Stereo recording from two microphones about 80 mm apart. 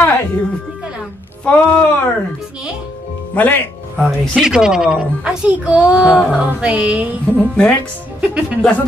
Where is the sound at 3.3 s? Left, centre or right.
Centre.